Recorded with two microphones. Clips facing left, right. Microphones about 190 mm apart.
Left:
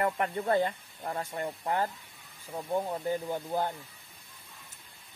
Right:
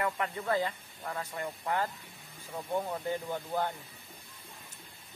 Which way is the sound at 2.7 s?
15° left (ahead or behind).